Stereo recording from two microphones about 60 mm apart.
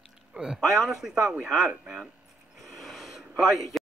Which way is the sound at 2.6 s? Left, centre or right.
Centre.